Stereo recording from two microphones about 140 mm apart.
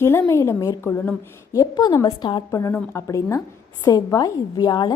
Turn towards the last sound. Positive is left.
turn(degrees=30)  # may be behind; listen again after turning